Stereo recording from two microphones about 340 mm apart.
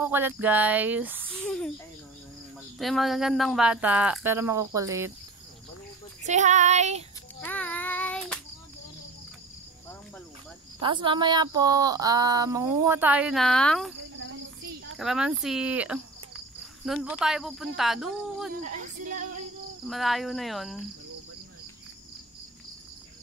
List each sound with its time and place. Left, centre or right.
0.0 s speech: centre
2.8 s speech: centre
6.2 s child singing: right
7.4 s child singing: centre
10.8 s speech: centre
14.1 s cricket: right
15.0 s speech: centre
19.9 s speech: centre